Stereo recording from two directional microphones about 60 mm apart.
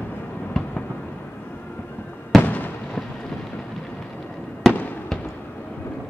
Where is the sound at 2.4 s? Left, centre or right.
Left.